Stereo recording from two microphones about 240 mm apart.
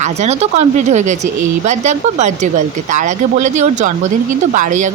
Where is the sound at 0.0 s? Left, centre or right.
Right.